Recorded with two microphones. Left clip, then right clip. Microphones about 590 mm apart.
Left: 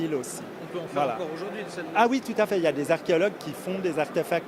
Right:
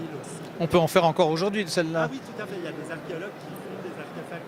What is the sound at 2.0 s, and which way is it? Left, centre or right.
Speech, left.